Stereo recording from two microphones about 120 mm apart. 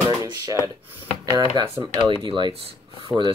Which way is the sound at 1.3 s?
40° right (ahead or behind).